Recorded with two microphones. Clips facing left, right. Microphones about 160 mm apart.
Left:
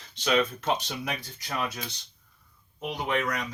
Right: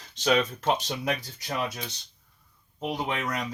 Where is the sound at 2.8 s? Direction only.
35° right (ahead or behind).